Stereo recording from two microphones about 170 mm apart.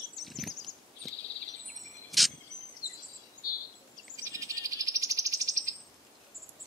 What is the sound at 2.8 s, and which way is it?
Bird vocalization, 20° left (ahead or behind).